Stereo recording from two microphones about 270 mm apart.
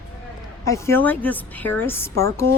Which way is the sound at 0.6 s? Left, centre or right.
Centre.